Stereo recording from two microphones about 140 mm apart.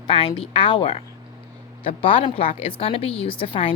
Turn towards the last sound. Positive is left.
turn(degrees=40)  # may be behind; listen again after turning